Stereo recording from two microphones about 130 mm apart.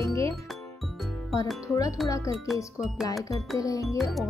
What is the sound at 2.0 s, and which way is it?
Speech, 25° left (ahead or behind).